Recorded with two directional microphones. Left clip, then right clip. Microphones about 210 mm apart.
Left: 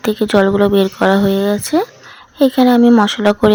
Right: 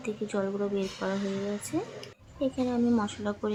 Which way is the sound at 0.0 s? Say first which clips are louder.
Left 19 dB; 45° left (ahead or behind).